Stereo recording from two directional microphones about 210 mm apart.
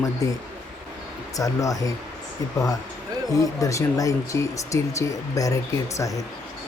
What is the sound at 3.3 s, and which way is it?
Speech, 15° left (ahead or behind).